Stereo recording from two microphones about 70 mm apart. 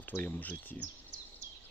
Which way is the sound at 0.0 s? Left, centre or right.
Left.